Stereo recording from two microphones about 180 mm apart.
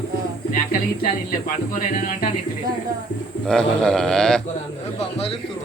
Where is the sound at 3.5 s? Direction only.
5° left (ahead or behind).